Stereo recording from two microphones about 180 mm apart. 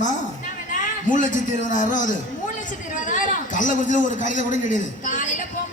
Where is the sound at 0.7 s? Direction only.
45° left (ahead or behind).